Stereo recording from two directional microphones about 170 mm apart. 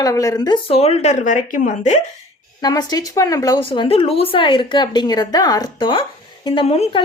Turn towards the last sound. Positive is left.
turn(degrees=35)  # may be behind; listen again after turning